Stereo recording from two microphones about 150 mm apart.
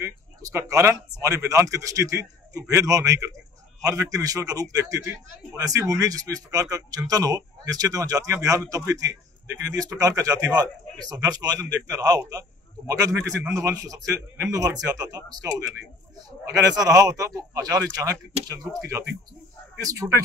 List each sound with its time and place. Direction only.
0.0 s speech: 20° right (ahead or behind)